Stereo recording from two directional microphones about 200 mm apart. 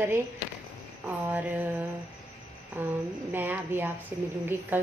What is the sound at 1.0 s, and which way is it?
Speech, 10° right (ahead or behind).